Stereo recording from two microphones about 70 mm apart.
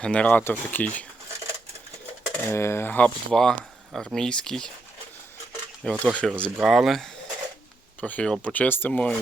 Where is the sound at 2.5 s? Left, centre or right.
Left.